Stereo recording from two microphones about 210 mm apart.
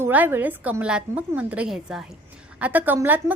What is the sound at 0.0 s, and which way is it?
A woman's voice, 10° right (ahead or behind).